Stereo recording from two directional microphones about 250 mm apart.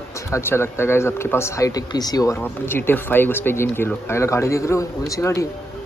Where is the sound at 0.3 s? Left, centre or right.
Centre.